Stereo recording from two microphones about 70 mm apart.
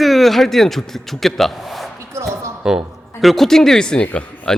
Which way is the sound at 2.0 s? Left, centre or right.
Right.